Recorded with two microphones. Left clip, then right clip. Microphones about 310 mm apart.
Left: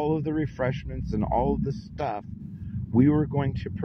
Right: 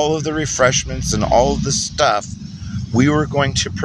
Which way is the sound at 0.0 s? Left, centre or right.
Left.